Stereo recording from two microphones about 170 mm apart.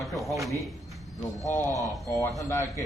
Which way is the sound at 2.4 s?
15° left (ahead or behind).